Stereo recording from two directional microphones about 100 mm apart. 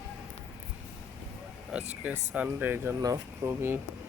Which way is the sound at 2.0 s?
15° right (ahead or behind).